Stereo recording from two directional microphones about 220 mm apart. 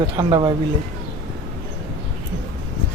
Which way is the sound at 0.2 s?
20° right (ahead or behind).